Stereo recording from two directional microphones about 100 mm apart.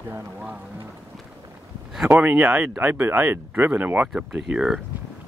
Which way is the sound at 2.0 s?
15° right (ahead or behind).